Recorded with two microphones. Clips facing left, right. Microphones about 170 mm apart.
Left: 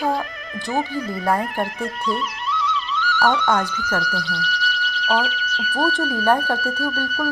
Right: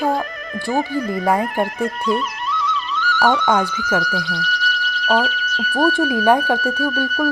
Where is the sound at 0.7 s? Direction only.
45° right (ahead or behind).